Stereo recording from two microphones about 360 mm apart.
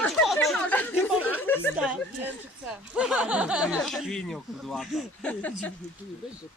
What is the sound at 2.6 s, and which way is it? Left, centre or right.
Speech, centre.